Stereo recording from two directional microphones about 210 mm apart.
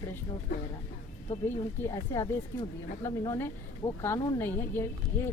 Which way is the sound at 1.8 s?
15° left (ahead or behind).